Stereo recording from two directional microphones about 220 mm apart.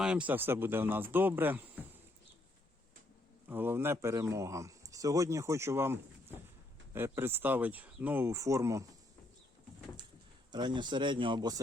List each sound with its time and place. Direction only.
0.0 s speech: 5° right (ahead or behind)
3.5 s speech: 10° right (ahead or behind)
10.5 s speech: 20° right (ahead or behind)